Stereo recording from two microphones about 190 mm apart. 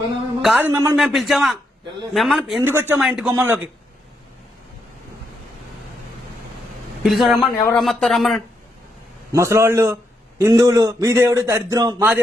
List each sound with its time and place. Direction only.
0.4 s a man's voice: 5° right (ahead or behind)
0.9 s speech: centre (ahead or behind)
2.6 s a man's voice: 10° right (ahead or behind)
7.0 s speech: centre (ahead or behind)
9.3 s a man's voice: 15° right (ahead or behind)